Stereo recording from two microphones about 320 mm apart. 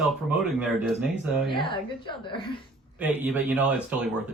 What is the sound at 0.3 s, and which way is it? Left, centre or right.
Speech, centre.